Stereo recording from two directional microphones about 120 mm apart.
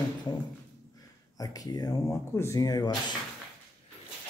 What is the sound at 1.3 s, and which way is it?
Speech, 30° left (ahead or behind).